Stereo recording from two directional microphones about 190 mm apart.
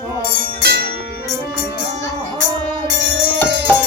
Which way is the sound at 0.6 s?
55° right (ahead or behind).